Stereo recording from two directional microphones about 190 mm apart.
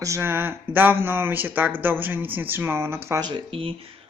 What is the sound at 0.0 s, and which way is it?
Speech, 15° right (ahead or behind).